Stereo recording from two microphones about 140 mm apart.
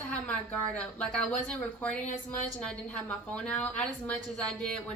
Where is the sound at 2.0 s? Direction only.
60° left (ahead or behind).